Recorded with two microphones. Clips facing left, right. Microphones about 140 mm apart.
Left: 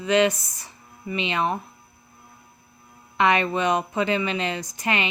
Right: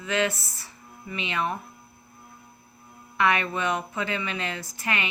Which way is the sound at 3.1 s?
20° left (ahead or behind).